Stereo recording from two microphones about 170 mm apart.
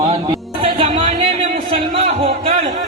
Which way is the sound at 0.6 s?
35° right (ahead or behind).